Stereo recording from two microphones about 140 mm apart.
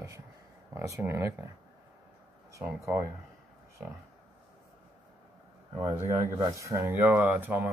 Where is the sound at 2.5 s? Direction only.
20° right (ahead or behind).